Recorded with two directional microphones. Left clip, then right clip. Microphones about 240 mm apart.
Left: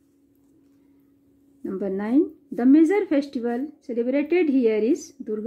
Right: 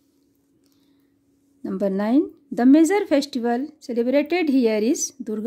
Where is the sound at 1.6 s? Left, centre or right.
Right.